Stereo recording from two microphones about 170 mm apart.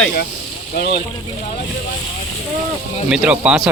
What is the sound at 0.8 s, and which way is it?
Speech, 75° left (ahead or behind).